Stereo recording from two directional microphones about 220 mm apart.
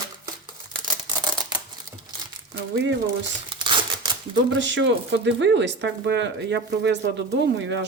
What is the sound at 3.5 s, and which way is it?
Crumpling, 20° right (ahead or behind).